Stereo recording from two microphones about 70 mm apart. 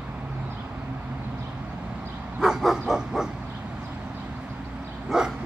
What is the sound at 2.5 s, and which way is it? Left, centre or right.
Bow-wow, centre.